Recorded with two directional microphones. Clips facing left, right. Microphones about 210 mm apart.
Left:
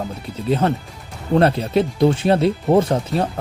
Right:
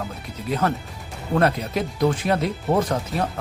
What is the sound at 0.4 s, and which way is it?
Speech, 30° left (ahead or behind).